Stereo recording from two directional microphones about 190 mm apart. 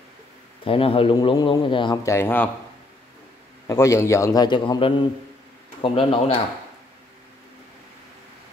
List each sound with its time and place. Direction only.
0.7 s a man's voice: 30° left (ahead or behind); by 2.5 s 10° left (ahead or behind)
3.6 s a man's voice: 15° left (ahead or behind)